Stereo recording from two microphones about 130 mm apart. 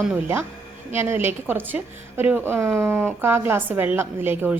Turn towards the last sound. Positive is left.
turn(degrees=-15)  # may be behind; listen again after turning